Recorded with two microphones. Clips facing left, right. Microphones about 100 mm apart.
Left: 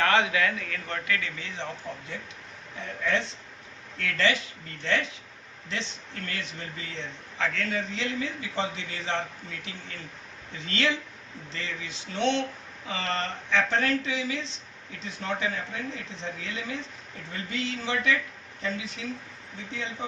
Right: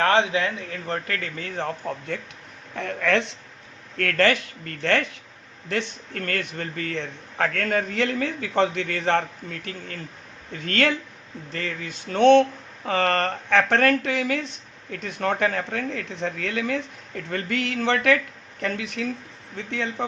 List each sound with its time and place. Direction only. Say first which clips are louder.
0.0 s a man's voice: right 3 dB; 30° right (ahead or behind); by 2.2 s 55° right (ahead or behind)
2.7 s speech: right 6 dB; 70° right (ahead or behind)
3.9 s speech: right 6 dB; 55° right (ahead or behind)